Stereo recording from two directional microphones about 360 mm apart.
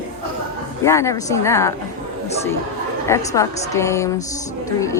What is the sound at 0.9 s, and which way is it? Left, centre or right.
Speech, centre.